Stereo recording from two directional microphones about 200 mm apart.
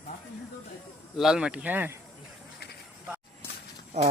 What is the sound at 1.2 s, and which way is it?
Speech, 5° right (ahead or behind).